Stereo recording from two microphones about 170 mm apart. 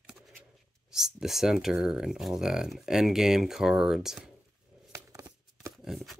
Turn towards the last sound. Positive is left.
turn(degrees=0)  # may be behind; listen again after turning